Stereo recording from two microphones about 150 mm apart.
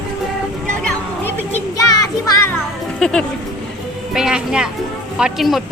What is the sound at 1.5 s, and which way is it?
Music, 20° left (ahead or behind).